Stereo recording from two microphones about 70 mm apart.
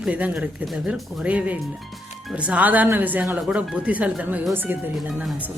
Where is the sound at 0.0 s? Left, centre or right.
Centre.